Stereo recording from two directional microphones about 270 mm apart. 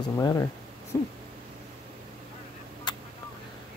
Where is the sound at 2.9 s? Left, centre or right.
Centre.